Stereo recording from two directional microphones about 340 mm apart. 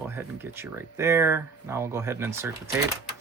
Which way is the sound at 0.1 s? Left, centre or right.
Centre.